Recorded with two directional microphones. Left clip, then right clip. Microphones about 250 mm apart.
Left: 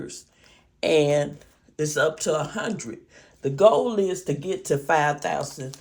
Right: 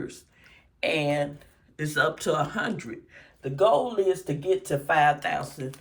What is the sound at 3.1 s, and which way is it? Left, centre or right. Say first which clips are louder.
Speech: left 5 dB; left.